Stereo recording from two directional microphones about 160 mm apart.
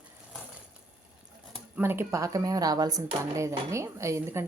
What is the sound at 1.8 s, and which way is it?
Speech, 15° right (ahead or behind).